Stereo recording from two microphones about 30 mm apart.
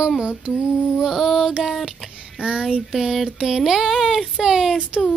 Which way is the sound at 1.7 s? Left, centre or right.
Centre.